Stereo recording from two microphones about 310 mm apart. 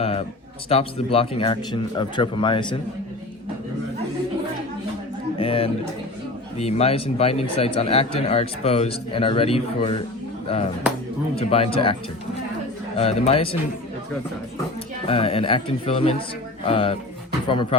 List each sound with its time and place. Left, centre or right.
0.0 s a sound: centre
0.7 s speech: centre
5.4 s a sound: centre
6.6 s speech: centre
11.3 s speech: centre
13.0 s speech: centre
15.0 s speech: centre